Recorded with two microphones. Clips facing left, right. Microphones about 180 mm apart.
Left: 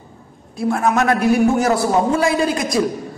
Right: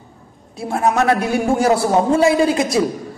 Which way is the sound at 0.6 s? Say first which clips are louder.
Even; 25° right (ahead or behind).